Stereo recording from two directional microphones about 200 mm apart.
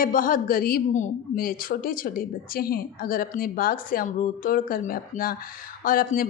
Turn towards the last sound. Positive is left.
turn(degrees=45)  # may be behind; listen again after turning